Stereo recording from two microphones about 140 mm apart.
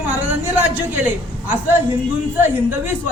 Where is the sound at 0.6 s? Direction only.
15° right (ahead or behind).